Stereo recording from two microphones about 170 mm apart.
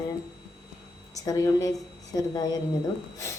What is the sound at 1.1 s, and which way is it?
Speech, 20° left (ahead or behind).